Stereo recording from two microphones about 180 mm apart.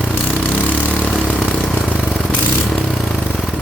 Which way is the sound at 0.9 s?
10° left (ahead or behind).